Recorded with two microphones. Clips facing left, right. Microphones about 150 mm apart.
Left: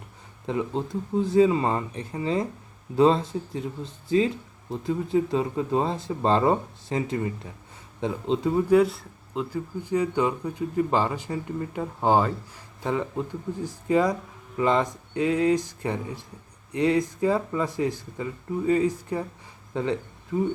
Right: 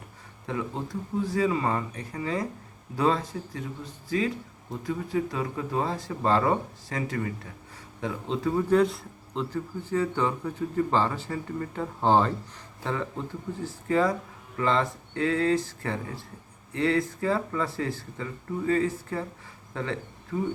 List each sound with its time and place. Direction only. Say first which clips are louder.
0.4 s speech: left 4 dB; 25° left (ahead or behind)
8.7 s speech: left 3 dB; 5° left (ahead or behind)